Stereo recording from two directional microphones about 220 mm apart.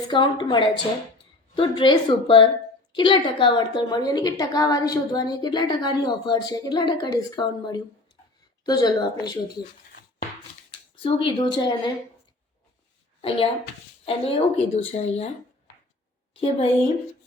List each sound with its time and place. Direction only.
0.1 s a woman's voice: 20° left (ahead or behind)
11.0 s a woman's voice: 25° left (ahead or behind)
13.2 s a woman's voice: 25° left (ahead or behind)
16.3 s a woman's voice: 25° left (ahead or behind)